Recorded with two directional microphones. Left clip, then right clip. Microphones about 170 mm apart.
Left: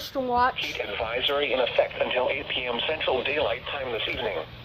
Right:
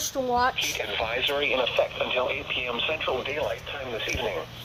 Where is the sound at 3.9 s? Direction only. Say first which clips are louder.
Right 1 dB; centre (ahead or behind).